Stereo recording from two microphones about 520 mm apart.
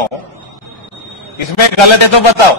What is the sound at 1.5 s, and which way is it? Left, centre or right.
Speech, left.